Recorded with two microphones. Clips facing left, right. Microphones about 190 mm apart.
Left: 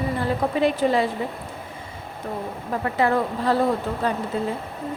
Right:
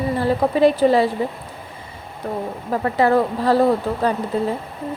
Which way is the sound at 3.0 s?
35° right (ahead or behind).